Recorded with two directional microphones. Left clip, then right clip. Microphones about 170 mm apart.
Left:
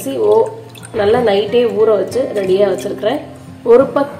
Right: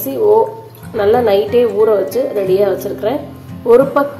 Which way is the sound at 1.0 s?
5° left (ahead or behind).